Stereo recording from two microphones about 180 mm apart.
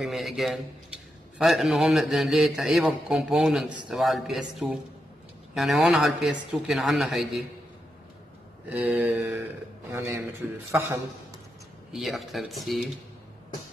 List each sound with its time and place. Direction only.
0.0 s a man's voice: centre (ahead or behind)
8.6 s mantra: 10° right (ahead or behind)
11.9 s a man's voice: centre (ahead or behind)